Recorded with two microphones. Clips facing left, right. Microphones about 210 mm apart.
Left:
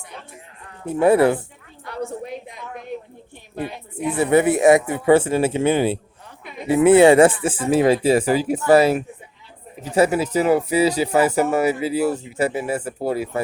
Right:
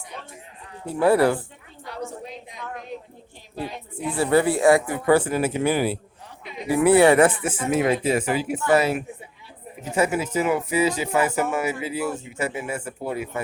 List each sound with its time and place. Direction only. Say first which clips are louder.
0.9 s speech: left 3 dB; 20° left (ahead or behind)
1.8 s a sound: left 5 dB; 60° left (ahead or behind)
3.6 s speech: left 4 dB; 20° left (ahead or behind)